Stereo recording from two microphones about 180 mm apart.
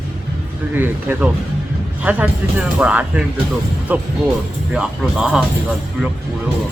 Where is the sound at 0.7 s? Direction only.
10° right (ahead or behind).